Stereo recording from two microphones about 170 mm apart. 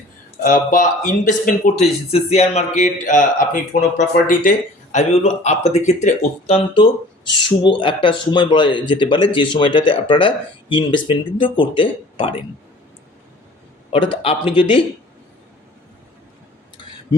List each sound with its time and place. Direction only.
0.4 s speech: 50° left (ahead or behind)
7.3 s speech: 30° left (ahead or behind)
13.9 s speech: 30° left (ahead or behind)